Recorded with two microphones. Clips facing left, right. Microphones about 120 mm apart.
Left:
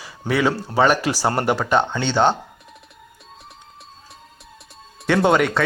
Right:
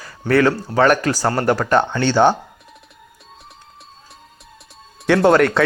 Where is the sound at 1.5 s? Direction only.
Centre (ahead or behind).